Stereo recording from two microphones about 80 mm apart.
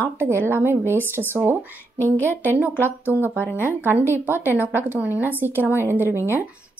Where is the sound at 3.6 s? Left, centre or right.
Right.